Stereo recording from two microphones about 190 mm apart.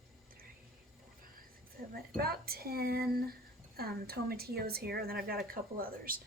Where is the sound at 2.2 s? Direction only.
55° right (ahead or behind).